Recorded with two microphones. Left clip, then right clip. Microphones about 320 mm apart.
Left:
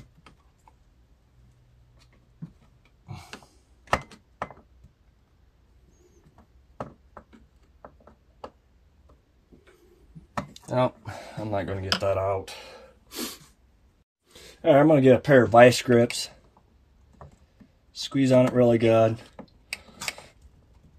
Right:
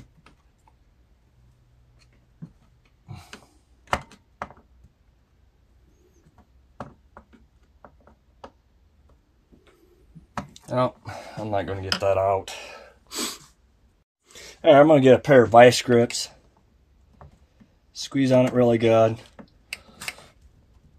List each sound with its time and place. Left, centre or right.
3.1 s a sound: centre
6.8 s a sound: centre
10.6 s speech: centre
11.3 s speech: centre
12.2 s speech: right
12.5 s speech: centre
14.6 s speech: right
15.2 s speech: centre
18.1 s speech: centre